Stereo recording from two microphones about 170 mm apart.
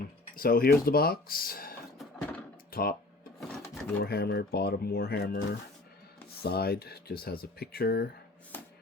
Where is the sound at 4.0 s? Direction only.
65° left (ahead or behind).